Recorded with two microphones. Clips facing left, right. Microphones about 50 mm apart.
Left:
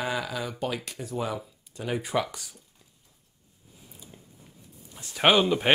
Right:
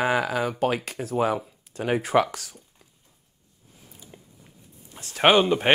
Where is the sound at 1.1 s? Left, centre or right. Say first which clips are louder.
Right 8 dB; right.